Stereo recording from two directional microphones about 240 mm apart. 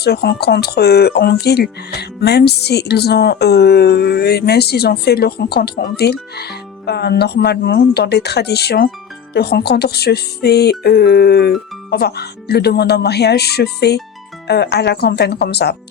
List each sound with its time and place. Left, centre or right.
0.0 s speech: left